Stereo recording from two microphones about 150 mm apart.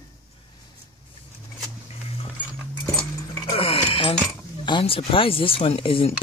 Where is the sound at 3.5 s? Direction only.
40° left (ahead or behind).